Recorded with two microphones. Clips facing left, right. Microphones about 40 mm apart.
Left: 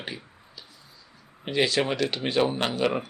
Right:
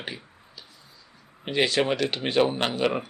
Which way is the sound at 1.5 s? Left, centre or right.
Right.